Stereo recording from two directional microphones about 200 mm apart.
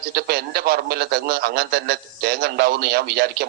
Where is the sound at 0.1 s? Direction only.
55° right (ahead or behind).